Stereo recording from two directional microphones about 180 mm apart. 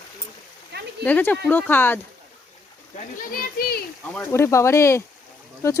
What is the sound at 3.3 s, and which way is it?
Speech, 55° left (ahead or behind).